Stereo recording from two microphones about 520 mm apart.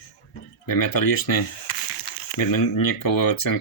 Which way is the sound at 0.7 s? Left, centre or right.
Left.